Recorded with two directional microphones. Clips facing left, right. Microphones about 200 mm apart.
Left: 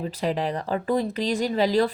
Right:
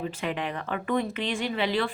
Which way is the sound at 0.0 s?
35° left (ahead or behind).